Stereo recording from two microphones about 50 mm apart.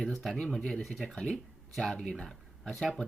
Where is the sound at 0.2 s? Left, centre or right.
Centre.